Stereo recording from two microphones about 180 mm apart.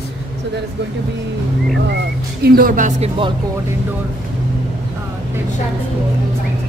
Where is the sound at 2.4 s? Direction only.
55° right (ahead or behind); by 3.3 s 35° right (ahead or behind).